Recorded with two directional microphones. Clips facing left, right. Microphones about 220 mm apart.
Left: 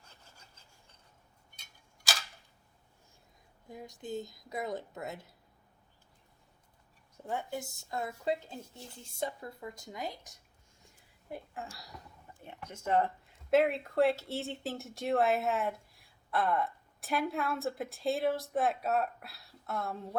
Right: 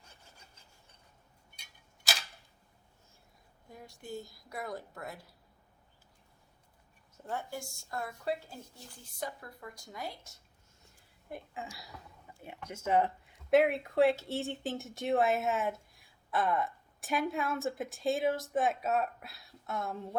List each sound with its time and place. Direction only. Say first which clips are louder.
3.7 s speech: left 4 dB; 20° left (ahead or behind)
7.3 s speech: left 2 dB; 20° left (ahead or behind)
11.5 s speech: even; centre (ahead or behind)